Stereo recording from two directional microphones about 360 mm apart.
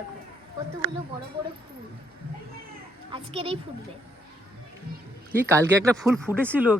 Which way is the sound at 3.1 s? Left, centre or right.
Centre.